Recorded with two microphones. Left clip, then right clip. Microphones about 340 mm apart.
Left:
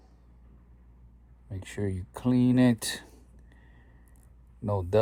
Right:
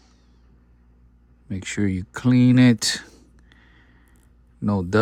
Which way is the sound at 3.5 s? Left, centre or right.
Right.